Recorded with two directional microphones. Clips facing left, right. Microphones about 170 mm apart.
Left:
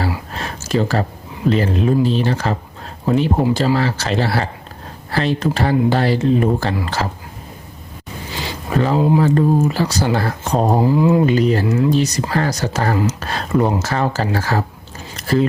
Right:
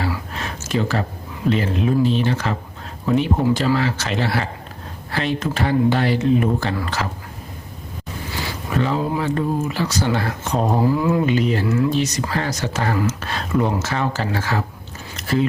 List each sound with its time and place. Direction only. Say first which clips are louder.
0.3 s a sound: left 5 dB; 35° left (ahead or behind)
1.5 s speech: left 3 dB; 40° left (ahead or behind)
8.3 s a sound: left 2 dB; 20° left (ahead or behind)
8.7 s speech: left 6 dB; 40° left (ahead or behind)
10.8 s speech: left 4 dB; 20° left (ahead or behind)
11.3 s speech: left 4 dB; 40° left (ahead or behind)
11.6 s speech: left 2 dB; 25° left (ahead or behind)
11.9 s speech: left 4 dB; 35° left (ahead or behind)
13.1 s a sound: left 3 dB; 35° left (ahead or behind)
13.8 s speech: left 3 dB; 40° left (ahead or behind)
15.1 s biting: left 3 dB; 40° left (ahead or behind)